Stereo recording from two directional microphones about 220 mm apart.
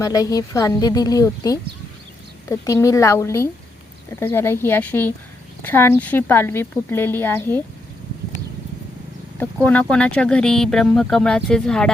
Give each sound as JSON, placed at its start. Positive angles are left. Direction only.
{"t": 0.0, "sound": "speech", "side_deg": 15}
{"t": 9.4, "sound": "speech", "side_deg": 5}